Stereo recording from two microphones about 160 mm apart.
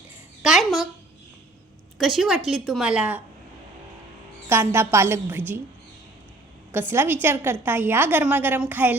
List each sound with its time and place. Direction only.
0.4 s a woman's voice: centre (ahead or behind)
2.0 s a woman's voice: centre (ahead or behind)
4.4 s a woman's voice: 15° right (ahead or behind)
6.7 s a woman's voice: 15° right (ahead or behind)